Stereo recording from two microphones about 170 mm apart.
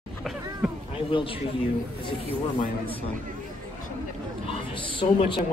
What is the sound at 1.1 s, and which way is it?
Speech, 30° left (ahead or behind).